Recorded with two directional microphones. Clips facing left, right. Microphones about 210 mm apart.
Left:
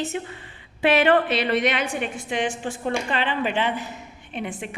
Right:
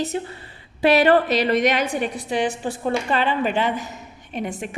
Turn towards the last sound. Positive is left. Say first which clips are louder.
# right 3 dB
turn(degrees=-40)  # may be behind; listen again after turning